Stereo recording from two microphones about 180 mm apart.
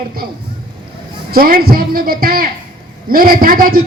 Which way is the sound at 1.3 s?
55° right (ahead or behind).